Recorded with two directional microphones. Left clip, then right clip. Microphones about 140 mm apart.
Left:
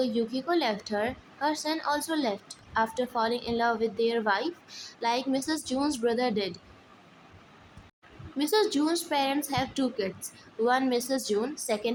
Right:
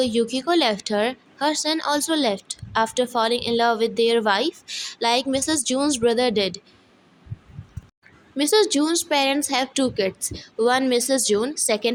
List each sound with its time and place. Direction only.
0.0 s speech: 45° right (ahead or behind)
8.4 s speech: 40° right (ahead or behind)